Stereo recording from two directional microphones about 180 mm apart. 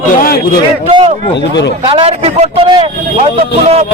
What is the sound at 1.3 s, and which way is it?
Speech, 75° left (ahead or behind).